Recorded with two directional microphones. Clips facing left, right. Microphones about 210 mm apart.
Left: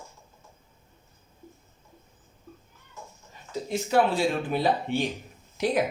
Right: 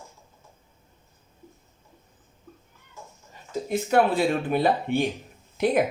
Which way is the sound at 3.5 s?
55° right (ahead or behind).